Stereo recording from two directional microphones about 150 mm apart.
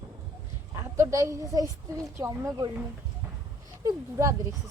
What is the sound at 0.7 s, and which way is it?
A woman's voice, 20° right (ahead or behind).